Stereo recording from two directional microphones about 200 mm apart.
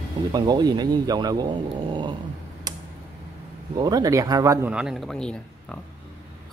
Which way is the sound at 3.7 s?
20° right (ahead or behind).